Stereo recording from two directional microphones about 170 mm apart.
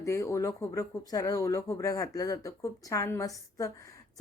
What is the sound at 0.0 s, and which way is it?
Speech, 15° left (ahead or behind).